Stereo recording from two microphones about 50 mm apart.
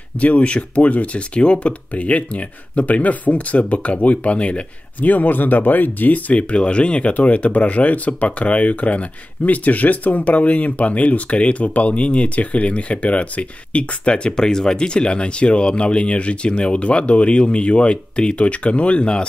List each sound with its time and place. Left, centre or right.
0.2 s speech: left